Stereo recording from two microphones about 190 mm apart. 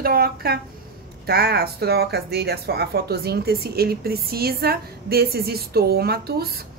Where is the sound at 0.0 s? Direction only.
55° right (ahead or behind).